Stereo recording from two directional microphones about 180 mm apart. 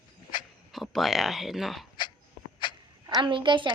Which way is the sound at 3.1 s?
25° right (ahead or behind).